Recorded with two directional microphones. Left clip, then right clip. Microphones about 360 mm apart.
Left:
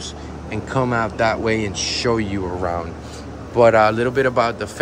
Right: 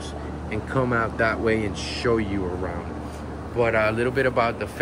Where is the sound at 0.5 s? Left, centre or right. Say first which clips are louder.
Left 4 dB; centre.